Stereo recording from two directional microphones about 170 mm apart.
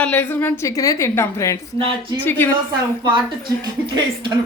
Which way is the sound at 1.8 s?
30° right (ahead or behind).